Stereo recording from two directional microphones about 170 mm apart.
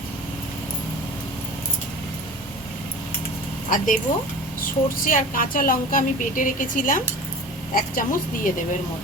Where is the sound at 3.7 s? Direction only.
50° left (ahead or behind).